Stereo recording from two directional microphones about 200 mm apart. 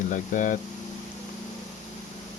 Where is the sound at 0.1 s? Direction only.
40° left (ahead or behind).